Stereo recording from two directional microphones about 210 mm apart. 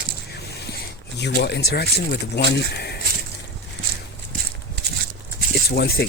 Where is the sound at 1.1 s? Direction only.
50° left (ahead or behind).